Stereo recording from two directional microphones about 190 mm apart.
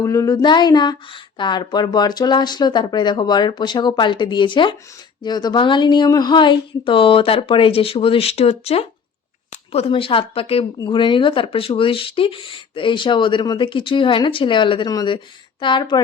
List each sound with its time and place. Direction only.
0.0 s speech: 15° left (ahead or behind)